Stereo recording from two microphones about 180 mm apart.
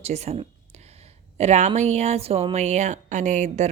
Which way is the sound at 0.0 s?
35° right (ahead or behind).